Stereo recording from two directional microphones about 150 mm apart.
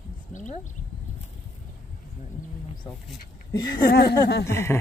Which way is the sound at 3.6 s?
30° left (ahead or behind).